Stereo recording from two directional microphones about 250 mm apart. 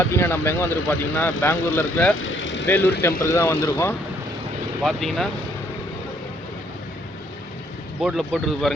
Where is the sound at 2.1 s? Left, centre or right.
Left.